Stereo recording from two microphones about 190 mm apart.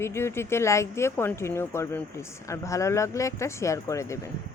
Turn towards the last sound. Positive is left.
turn(degrees=15)  # may be behind; listen again after turning